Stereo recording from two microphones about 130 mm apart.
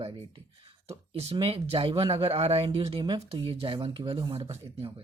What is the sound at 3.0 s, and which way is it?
Speech, 35° right (ahead or behind).